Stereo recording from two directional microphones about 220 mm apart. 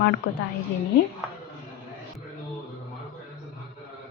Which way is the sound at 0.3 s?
55° left (ahead or behind).